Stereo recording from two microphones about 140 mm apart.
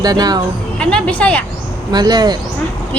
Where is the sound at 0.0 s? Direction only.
30° right (ahead or behind).